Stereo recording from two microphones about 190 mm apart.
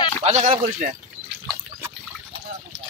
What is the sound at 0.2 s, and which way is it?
Speech, 40° right (ahead or behind).